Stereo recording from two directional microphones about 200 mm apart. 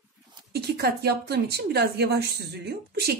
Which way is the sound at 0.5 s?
55° right (ahead or behind).